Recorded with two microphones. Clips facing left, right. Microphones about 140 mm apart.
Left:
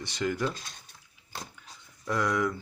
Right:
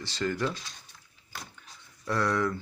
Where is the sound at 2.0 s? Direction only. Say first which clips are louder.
Even; 15° left (ahead or behind).